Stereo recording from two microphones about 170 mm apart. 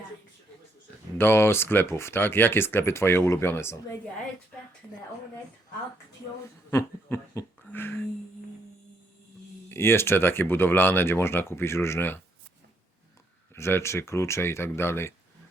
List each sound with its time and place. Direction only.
1.2 s speech: 15° left (ahead or behind)
6.7 s a sound: 15° left (ahead or behind)
9.6 s speech: 15° left (ahead or behind)
13.5 s speech: 15° left (ahead or behind)